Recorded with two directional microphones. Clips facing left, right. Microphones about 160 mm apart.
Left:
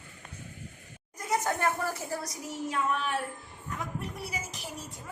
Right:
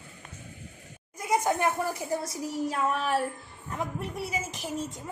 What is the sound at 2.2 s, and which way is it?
Child singing, 35° right (ahead or behind).